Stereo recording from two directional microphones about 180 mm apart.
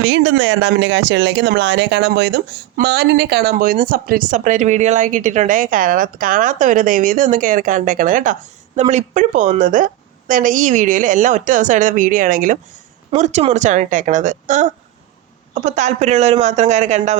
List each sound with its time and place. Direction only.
0.0 s a woman's voice: 90° right; by 17.2 s 40° right (ahead or behind)